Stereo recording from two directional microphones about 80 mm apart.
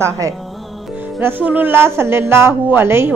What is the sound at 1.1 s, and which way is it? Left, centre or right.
A woman's voice, right.